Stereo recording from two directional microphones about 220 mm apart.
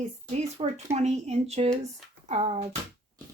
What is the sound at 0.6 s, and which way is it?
Speech, 25° right (ahead or behind).